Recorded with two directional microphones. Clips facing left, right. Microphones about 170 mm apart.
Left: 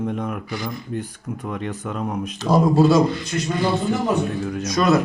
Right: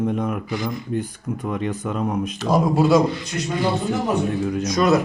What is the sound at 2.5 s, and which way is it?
Speech, 15° right (ahead or behind).